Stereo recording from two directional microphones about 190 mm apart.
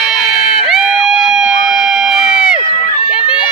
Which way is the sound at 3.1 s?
5° right (ahead or behind).